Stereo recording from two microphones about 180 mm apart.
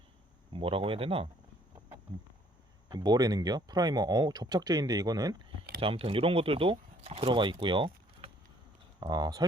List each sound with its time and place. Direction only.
0.5 s speech: 30° right (ahead or behind)
2.9 s speech: 20° right (ahead or behind)
5.8 s speech: 30° right (ahead or behind)